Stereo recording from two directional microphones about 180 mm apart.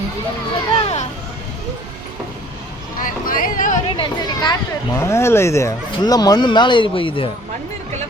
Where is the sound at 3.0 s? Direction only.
50° left (ahead or behind).